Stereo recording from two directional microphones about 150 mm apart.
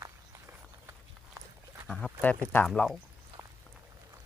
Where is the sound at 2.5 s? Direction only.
15° left (ahead or behind).